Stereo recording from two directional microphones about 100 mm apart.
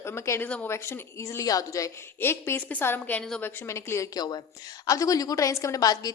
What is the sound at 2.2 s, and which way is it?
Speech, 25° left (ahead or behind).